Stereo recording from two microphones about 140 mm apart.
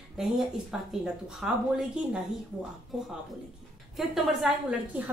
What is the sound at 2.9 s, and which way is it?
A woman's voice, 5° right (ahead or behind).